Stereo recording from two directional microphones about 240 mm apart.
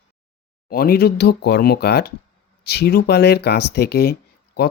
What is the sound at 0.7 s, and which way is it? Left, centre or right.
Speech, left.